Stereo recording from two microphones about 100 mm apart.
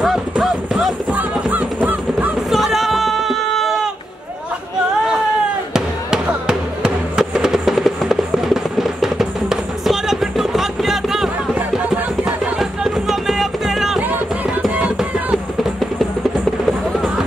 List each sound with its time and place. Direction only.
0.0 s clip-clop: centre (ahead or behind)
1.1 s honk: 15° right (ahead or behind)
2.5 s a sound: centre (ahead or behind)
5.7 s music: 5° right (ahead or behind)
14.0 s music: 15° right (ahead or behind)
14.6 s music: 5° right (ahead or behind)